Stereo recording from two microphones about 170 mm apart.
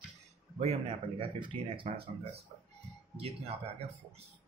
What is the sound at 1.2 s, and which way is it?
Speech, 30° right (ahead or behind).